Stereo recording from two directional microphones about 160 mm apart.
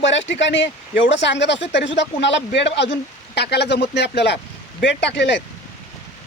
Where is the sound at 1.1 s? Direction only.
90° left.